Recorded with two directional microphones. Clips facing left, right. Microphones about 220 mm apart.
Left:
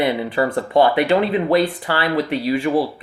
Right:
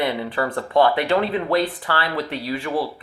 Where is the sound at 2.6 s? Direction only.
25° left (ahead or behind).